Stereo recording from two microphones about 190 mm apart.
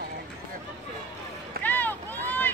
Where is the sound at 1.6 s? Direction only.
10° left (ahead or behind).